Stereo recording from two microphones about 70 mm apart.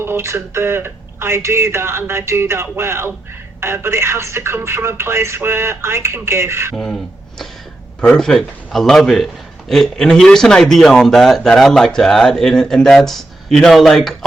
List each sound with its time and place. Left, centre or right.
0.0 s speech: right
6.7 s a man's voice: centre